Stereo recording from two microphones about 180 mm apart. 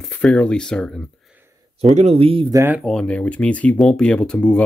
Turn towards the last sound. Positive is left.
turn(degrees=5)  # may be behind; listen again after turning